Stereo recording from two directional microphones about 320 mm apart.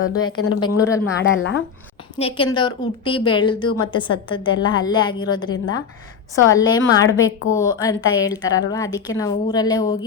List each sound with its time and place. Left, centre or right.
0.0 s speech: left
0.8 s a woman's voice: centre
1.2 s speech: left
2.1 s a woman's voice: centre